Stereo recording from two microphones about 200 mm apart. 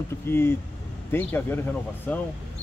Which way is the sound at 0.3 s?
10° left (ahead or behind).